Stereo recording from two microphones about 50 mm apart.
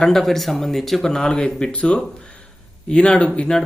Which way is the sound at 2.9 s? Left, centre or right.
Left.